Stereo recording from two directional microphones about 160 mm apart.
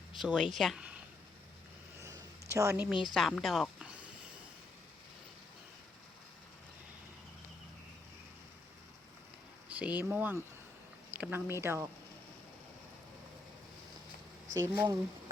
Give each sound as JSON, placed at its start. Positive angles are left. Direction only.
{"t": 0.2, "sound": "speech", "side_deg": 0}
{"t": 2.0, "sound": "a sound", "side_deg": -20}
{"t": 3.2, "sound": "speech", "side_deg": 0}
{"t": 9.6, "sound": "a sound", "side_deg": -10}
{"t": 10.0, "sound": "speech", "side_deg": -15}
{"t": 14.5, "sound": "speech", "side_deg": -15}